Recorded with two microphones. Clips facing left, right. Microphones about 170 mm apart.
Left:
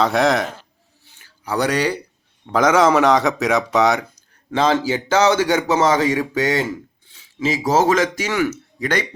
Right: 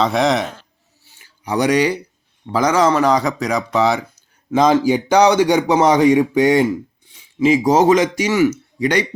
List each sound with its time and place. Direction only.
0.0 s speech: centre (ahead or behind)
1.5 s speech: 10° right (ahead or behind)
2.5 s speech: centre (ahead or behind)
4.5 s speech: 15° right (ahead or behind)